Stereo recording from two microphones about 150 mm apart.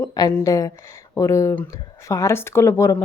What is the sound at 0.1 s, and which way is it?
A woman's voice, 25° left (ahead or behind).